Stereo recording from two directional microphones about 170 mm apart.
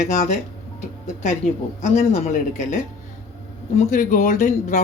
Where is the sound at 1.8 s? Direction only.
45° left (ahead or behind).